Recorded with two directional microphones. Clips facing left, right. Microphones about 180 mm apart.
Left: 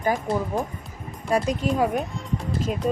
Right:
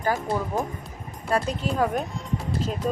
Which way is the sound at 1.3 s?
10° left (ahead or behind).